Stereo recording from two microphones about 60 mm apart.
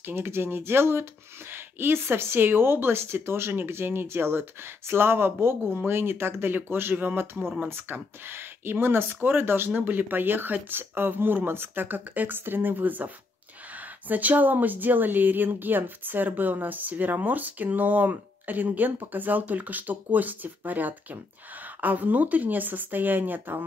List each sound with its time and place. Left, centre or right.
0.0 s speech: right